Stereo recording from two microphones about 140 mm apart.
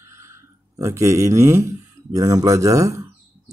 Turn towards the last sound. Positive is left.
turn(degrees=-25)  # may be behind; listen again after turning